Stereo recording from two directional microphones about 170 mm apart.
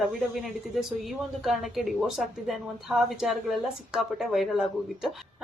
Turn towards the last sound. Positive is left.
turn(degrees=0)  # may be behind; listen again after turning